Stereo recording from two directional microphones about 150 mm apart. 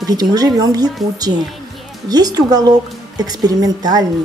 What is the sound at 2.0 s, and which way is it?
A woman's voice, 25° right (ahead or behind).